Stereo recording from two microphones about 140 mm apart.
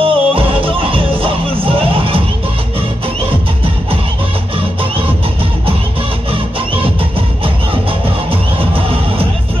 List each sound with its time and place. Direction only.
0.0 s music: 40° right (ahead or behind)
6.3 s music: 40° right (ahead or behind)